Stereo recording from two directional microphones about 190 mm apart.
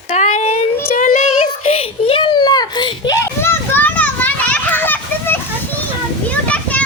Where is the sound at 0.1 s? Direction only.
40° left (ahead or behind).